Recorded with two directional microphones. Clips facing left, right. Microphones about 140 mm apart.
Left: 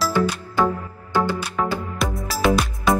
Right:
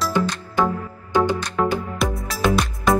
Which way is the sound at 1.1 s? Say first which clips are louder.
Right 2 dB; 20° right (ahead or behind).